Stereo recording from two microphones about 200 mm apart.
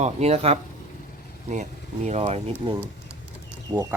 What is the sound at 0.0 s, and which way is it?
Speech, 30° right (ahead or behind).